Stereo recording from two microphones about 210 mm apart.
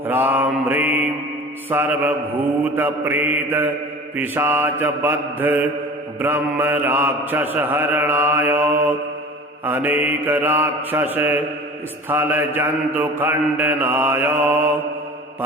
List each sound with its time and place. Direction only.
0.1 s mantra: 10° right (ahead or behind)